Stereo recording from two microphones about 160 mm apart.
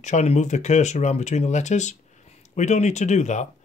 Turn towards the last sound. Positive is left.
turn(degrees=45)  # may be behind; listen again after turning